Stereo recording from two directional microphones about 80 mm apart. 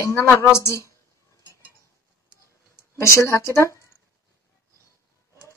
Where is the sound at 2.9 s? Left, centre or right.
Left.